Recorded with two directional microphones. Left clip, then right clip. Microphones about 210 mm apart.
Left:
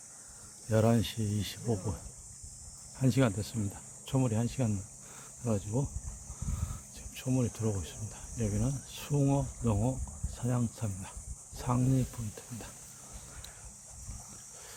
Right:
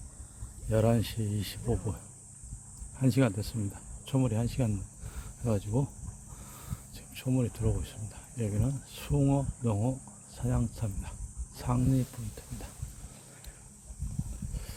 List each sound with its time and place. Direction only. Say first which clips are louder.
0.7 s speech: even; 5° right (ahead or behind)
3.0 s speech: right 1 dB; 10° right (ahead or behind)
5.5 s speech: right 2 dB; 25° right (ahead or behind)
6.9 s speech: right 1 dB; 10° right (ahead or behind)